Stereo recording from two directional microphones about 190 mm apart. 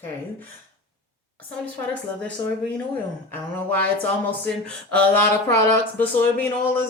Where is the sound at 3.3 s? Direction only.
10° left (ahead or behind).